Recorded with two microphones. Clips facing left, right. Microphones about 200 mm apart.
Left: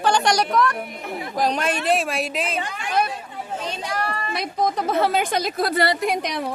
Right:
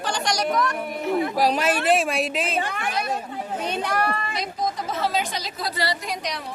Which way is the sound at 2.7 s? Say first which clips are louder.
Left 2 dB; 55° right (ahead or behind).